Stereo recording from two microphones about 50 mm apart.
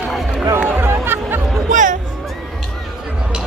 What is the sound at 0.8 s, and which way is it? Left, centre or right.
Music, right.